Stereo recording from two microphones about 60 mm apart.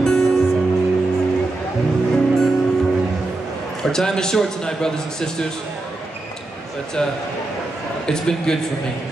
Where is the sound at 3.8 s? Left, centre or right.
Centre.